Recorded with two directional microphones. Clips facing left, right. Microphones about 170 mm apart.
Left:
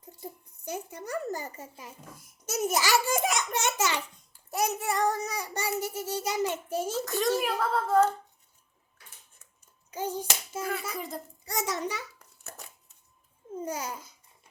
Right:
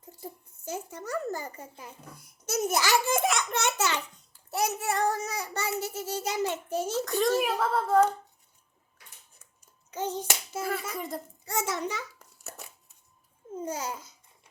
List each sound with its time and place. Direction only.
0.2 s a child's voice: 15° left (ahead or behind)
7.7 s finger snapping: 5° right (ahead or behind)
9.9 s a child's voice: 10° left (ahead or behind)
10.5 s finger snapping: 5° right (ahead or behind)
11.4 s a child's voice: 15° left (ahead or behind)
12.4 s a sound: 5° right (ahead or behind)
13.7 s a child's voice: 10° left (ahead or behind)